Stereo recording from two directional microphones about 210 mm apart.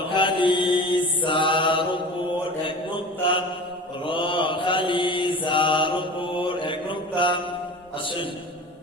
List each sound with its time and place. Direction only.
0.1 s mantra: 25° left (ahead or behind)